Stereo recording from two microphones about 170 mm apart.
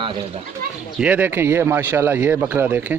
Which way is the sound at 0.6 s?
60° right (ahead or behind).